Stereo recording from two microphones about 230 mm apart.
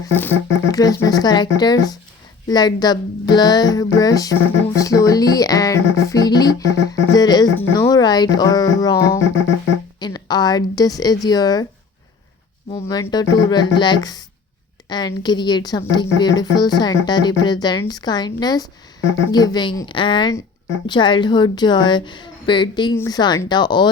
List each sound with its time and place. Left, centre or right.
0.1 s speech: centre
12.9 s a woman's voice: centre